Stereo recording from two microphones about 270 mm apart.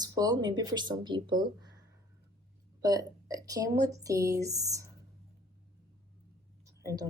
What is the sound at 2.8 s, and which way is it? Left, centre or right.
A woman's voice, centre.